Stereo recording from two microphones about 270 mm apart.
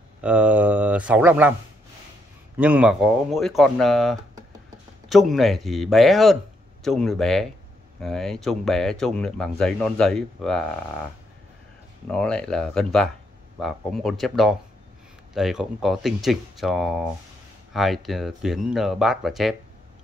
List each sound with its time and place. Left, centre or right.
0.2 s speech: centre
2.5 s speech: centre
12.1 s speech: centre